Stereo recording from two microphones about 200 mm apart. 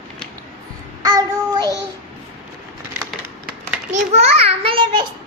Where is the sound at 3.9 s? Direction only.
35° right (ahead or behind).